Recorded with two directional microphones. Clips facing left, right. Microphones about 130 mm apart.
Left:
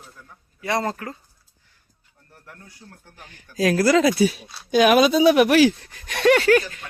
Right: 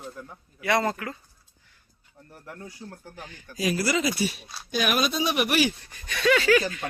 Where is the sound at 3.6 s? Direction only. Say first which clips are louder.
Left 8 dB; 90° left.